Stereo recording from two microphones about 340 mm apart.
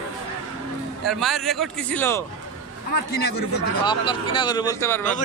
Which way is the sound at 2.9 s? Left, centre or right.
Left.